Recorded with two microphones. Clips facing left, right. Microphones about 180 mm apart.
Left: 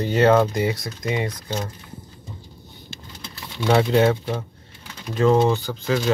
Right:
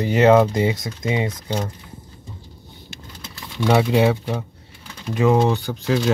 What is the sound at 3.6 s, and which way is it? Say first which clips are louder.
Speech: right 1 dB; 5° right (ahead or behind).